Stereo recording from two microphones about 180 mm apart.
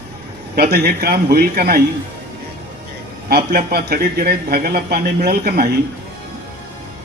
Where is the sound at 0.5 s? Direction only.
60° right (ahead or behind).